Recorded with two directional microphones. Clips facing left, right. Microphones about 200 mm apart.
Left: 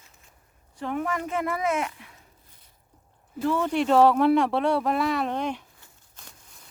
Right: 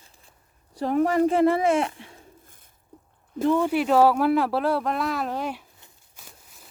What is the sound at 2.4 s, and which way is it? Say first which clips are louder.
Bird: right 3 dB; 50° right (ahead or behind).